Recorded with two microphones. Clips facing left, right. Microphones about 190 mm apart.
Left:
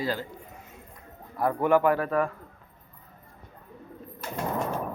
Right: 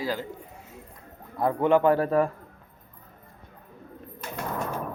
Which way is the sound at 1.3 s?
20° right (ahead or behind).